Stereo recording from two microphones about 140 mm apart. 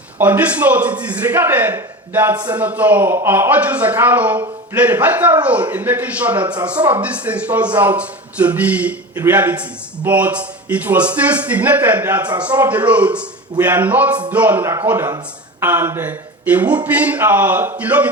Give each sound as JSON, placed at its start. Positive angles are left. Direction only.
{"t": 0.2, "sound": "speech", "side_deg": -10}